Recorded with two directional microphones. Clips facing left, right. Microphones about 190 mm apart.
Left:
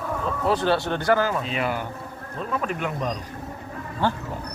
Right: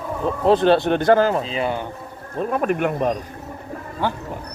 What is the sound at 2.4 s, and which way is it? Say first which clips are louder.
Speech: right 7 dB; 55° right (ahead or behind).